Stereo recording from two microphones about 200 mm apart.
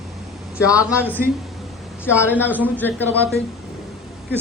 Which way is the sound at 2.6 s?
10° left (ahead or behind).